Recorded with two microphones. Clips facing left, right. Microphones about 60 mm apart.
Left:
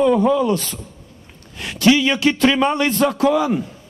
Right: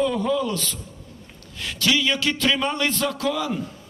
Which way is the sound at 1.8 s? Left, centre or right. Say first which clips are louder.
Left 7 dB; left.